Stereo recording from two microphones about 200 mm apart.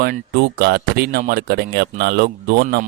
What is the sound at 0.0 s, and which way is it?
Speech, 50° right (ahead or behind).